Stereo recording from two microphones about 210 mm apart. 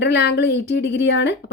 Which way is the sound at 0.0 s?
55° left (ahead or behind).